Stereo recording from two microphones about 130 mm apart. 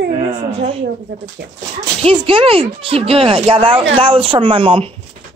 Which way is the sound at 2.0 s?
45° right (ahead or behind).